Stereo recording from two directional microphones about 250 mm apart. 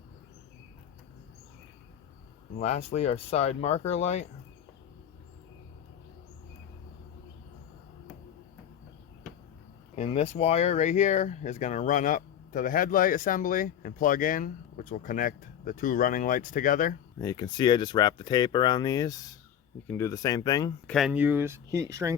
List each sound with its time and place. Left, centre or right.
2.6 s speech: left
9.9 s speech: left
17.2 s speech: centre
20.9 s speech: centre